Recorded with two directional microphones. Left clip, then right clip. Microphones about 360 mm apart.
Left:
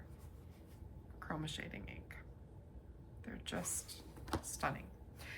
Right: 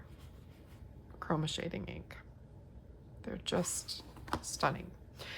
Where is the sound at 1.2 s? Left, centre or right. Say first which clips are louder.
Right 8 dB; centre.